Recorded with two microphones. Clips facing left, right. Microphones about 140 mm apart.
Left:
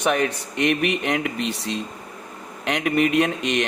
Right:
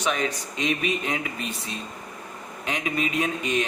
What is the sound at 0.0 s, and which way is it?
Speech, 60° left (ahead or behind).